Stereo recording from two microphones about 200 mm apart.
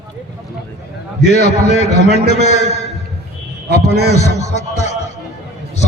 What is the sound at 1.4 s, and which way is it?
A man's voice, 35° left (ahead or behind).